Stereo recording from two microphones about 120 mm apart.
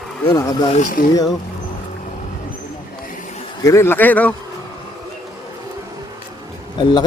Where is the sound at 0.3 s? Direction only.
25° left (ahead or behind).